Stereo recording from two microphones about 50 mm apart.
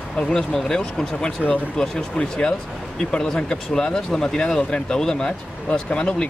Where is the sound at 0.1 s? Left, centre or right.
Centre.